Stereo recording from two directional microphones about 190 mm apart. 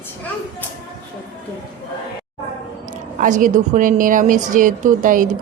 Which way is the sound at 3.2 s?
40° right (ahead or behind).